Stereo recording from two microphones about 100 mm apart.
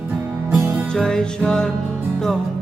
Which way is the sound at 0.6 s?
20° right (ahead or behind).